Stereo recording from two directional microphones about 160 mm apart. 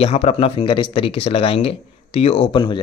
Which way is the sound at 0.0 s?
40° left (ahead or behind).